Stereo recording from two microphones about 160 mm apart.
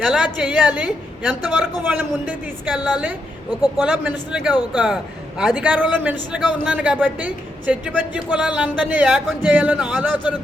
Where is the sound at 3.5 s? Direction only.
25° left (ahead or behind).